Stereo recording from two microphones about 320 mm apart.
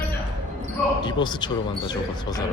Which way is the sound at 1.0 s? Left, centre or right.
Centre.